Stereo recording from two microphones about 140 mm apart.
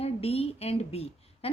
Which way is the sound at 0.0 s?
45° left (ahead or behind).